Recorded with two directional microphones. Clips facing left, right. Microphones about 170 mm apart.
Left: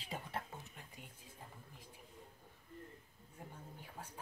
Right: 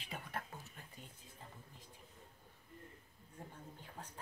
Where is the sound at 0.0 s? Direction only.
30° left (ahead or behind).